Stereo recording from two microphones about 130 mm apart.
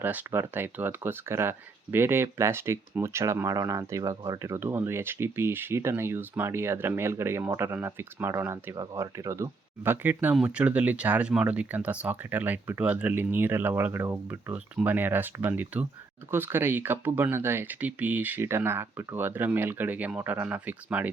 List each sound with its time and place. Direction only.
0.0 s speech: 15° right (ahead or behind)